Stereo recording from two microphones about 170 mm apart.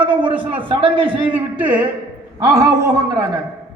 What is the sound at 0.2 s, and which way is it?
A man's voice, 30° right (ahead or behind).